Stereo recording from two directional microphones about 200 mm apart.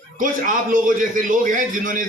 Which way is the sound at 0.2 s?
40° right (ahead or behind).